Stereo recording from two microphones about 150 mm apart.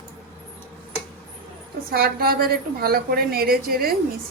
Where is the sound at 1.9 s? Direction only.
90° right.